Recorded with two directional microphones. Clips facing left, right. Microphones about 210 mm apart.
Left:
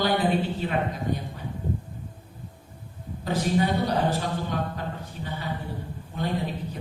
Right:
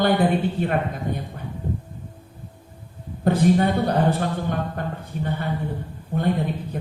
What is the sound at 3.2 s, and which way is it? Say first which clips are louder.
A man's voice: right 6 dB; 55° right (ahead or behind).